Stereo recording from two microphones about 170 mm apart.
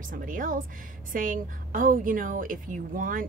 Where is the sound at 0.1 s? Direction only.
55° right (ahead or behind).